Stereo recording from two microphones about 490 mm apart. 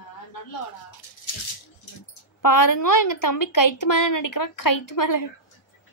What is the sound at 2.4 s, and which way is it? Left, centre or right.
A woman's voice, left.